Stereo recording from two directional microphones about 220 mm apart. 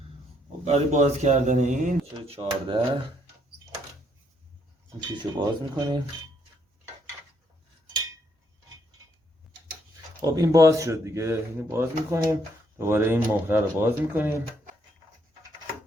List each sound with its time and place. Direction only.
0.6 s speech: 30° right (ahead or behind)
5.1 s speech: 20° right (ahead or behind)
10.2 s speech: 15° right (ahead or behind)